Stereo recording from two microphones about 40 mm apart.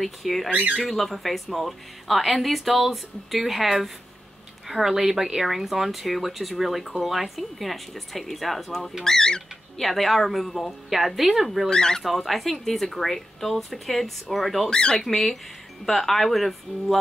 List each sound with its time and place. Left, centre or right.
0.0 s speech: centre
0.5 s speech: right
0.8 s speech: centre
9.0 s speech: centre
9.8 s speech: centre
11.7 s speech: centre
12.0 s speech: centre
14.7 s speech: left
15.0 s speech: centre